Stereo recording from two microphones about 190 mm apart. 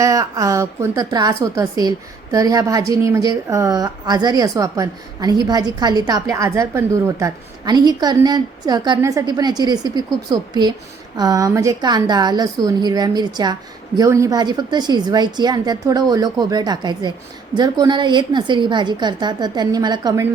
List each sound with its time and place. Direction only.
0.0 s a woman's voice: 15° right (ahead or behind)